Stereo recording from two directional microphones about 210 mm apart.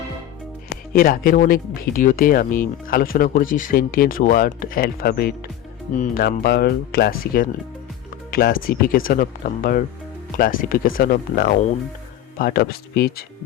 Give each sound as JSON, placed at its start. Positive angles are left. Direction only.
{"t": 0.9, "sound": "speech", "side_deg": 40}